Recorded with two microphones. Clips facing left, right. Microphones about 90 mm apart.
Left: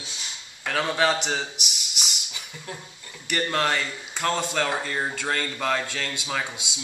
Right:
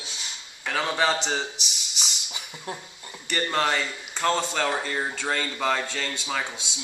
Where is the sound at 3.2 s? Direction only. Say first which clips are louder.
Even; centre (ahead or behind).